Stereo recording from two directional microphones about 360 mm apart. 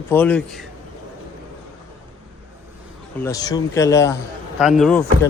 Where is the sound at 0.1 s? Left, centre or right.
Centre.